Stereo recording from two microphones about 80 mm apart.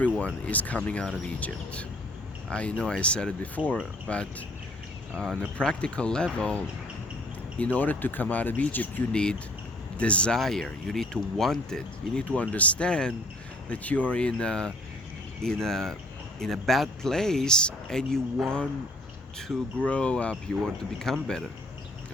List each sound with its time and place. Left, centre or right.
0.0 s speech: centre
5.5 s speech: centre
9.1 s speech: centre
12.4 s speech: centre
19.8 s speech: centre